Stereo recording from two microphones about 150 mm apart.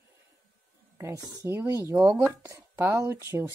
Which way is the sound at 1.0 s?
20° right (ahead or behind).